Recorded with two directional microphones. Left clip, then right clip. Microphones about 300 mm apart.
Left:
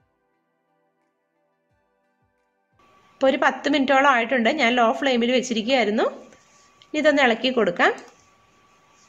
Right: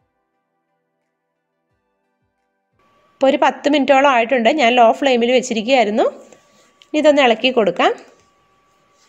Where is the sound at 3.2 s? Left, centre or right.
Centre.